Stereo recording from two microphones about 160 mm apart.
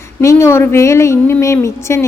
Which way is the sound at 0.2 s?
15° left (ahead or behind).